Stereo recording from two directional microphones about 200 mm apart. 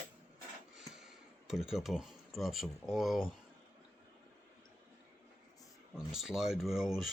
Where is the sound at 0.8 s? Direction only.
Centre (ahead or behind).